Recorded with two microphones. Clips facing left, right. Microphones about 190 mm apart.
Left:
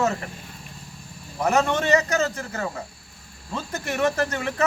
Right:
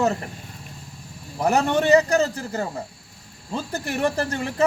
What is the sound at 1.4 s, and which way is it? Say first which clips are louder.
Speech: right 2 dB; 35° right (ahead or behind).